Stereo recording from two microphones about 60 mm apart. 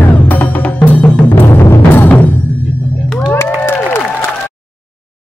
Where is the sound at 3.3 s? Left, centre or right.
Left.